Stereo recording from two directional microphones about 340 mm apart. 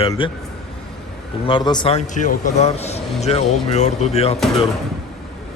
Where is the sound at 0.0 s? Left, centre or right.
Centre.